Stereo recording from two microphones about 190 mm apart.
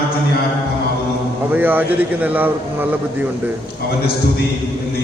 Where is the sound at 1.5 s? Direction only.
10° right (ahead or behind).